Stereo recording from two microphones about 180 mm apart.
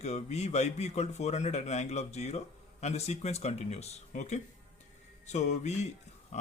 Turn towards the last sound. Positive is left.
turn(degrees=40)  # may be behind; listen again after turning